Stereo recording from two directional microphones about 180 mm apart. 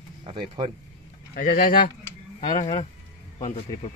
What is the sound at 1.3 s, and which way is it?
Speech, 55° left (ahead or behind).